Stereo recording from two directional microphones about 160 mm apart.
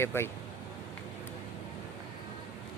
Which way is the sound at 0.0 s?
15° left (ahead or behind).